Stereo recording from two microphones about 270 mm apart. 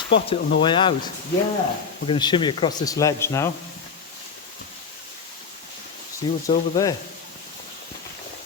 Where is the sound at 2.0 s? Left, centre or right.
Centre.